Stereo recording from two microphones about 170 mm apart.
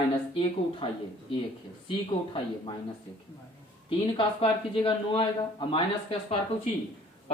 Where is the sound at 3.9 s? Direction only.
30° left (ahead or behind).